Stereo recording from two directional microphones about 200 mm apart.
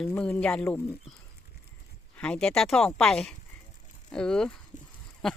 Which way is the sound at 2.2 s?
5° left (ahead or behind).